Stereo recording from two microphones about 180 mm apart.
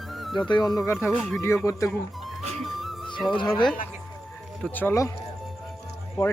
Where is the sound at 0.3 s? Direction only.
25° left (ahead or behind).